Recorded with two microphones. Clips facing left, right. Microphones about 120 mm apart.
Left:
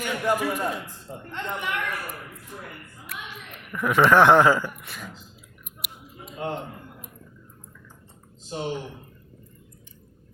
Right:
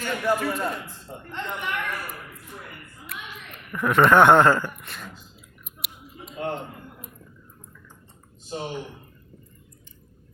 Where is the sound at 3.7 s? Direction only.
Centre (ahead or behind).